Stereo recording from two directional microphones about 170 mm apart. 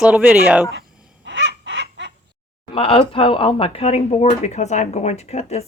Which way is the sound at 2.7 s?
35° left (ahead or behind).